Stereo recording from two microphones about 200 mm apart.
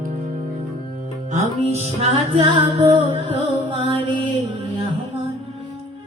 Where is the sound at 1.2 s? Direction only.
35° right (ahead or behind).